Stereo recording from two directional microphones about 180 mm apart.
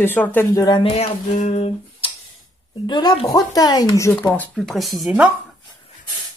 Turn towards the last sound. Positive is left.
turn(degrees=-5)  # may be behind; listen again after turning